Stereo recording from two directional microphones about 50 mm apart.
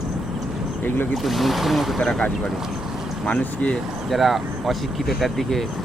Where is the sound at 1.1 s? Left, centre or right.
Centre.